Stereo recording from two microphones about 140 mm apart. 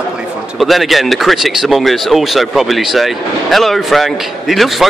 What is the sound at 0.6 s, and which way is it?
A man's voice, centre (ahead or behind).